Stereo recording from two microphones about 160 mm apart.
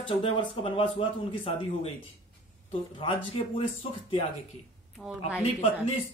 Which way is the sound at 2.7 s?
35° left (ahead or behind).